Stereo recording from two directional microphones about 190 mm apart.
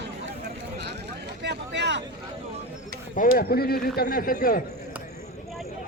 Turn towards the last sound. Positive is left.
turn(degrees=50)  # may be behind; listen again after turning